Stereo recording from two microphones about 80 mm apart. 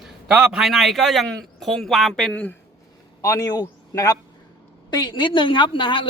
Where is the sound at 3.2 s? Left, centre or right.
Left.